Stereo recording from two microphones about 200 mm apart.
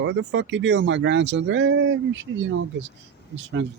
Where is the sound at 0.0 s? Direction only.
65° right (ahead or behind).